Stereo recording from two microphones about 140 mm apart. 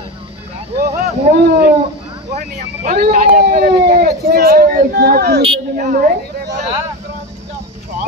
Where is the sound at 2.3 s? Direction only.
60° right (ahead or behind).